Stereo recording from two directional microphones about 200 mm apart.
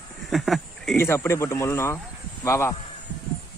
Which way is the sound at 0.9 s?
10° left (ahead or behind).